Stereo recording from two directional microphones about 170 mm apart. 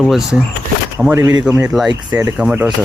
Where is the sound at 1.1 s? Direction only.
15° right (ahead or behind).